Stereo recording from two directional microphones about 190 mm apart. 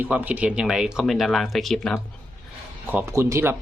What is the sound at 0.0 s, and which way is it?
Speech, 10° right (ahead or behind).